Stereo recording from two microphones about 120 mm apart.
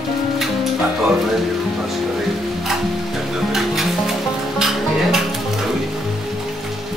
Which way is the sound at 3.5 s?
Centre (ahead or behind).